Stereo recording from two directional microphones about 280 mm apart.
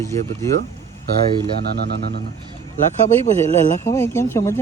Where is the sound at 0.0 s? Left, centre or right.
Centre.